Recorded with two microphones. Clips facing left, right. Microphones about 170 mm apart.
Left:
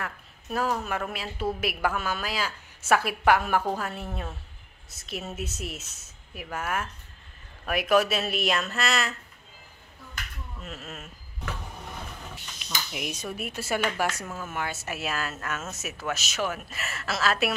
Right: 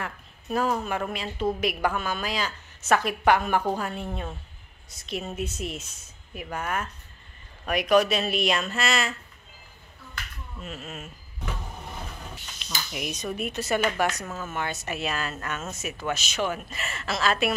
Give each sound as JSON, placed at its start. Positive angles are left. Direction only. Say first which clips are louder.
{"t": 0.0, "sound": "a woman's voice", "louder": "right 1 dB", "side_deg": 0}
{"t": 10.6, "sound": "speech", "louder": "right 3 dB", "side_deg": 0}
{"t": 12.6, "sound": "speech", "louder": "right 1 dB", "side_deg": 5}